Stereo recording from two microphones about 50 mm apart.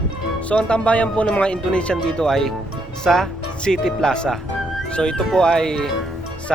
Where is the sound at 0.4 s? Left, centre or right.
Left.